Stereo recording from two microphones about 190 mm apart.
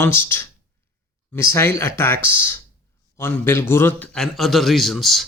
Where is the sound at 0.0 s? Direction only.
10° left (ahead or behind).